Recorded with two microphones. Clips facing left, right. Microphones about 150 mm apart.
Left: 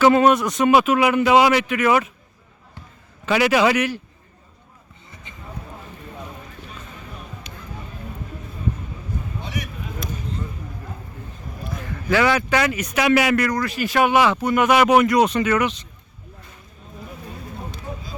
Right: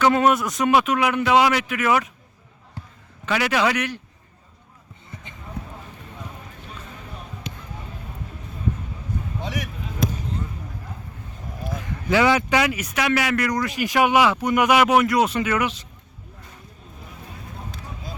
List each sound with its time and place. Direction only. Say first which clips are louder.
0.0 s a man's voice: left 3 dB; centre (ahead or behind)
3.2 s a man's voice: left 4 dB; 5° left (ahead or behind)
7.5 s a sound: right 4 dB; 90° right
9.4 s basketball bounce: right 3 dB; 90° right
11.8 s a man's voice: even; 20° right (ahead or behind)
13.0 s a man's voice: left 5 dB; 10° left (ahead or behind)
13.5 s speech: left 1 dB; 20° right (ahead or behind)